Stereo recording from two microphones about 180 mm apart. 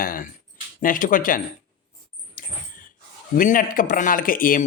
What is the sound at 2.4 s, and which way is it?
Dog, 50° left (ahead or behind).